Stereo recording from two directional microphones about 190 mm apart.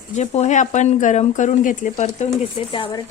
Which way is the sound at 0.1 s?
35° left (ahead or behind).